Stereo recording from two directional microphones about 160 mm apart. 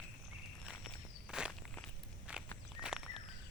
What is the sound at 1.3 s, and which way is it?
Walk, 5° right (ahead or behind).